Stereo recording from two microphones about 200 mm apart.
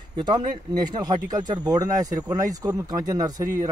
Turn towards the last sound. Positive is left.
turn(degrees=-20)  # may be behind; listen again after turning